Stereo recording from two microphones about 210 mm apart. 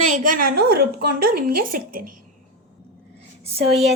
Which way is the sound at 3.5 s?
30° right (ahead or behind).